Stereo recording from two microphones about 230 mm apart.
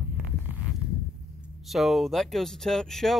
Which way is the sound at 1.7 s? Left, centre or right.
Centre.